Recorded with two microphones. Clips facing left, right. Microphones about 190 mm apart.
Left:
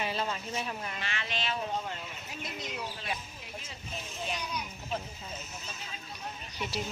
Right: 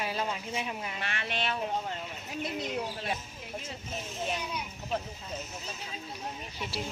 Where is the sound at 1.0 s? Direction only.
60° right (ahead or behind).